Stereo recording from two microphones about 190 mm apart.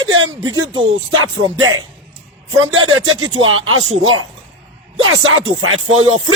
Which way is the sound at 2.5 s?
90° right.